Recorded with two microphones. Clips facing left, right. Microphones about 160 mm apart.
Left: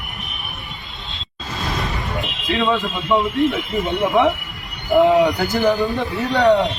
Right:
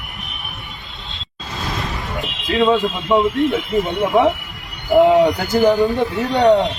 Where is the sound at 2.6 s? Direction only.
20° right (ahead or behind).